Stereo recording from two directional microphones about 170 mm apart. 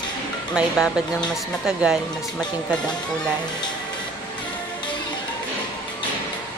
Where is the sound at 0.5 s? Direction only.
5° right (ahead or behind).